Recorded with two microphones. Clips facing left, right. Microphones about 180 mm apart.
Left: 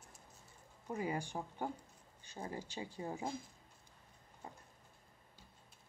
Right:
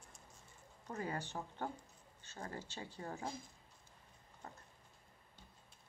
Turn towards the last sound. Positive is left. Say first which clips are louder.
# left 1 dB
turn(degrees=10)  # may be behind; listen again after turning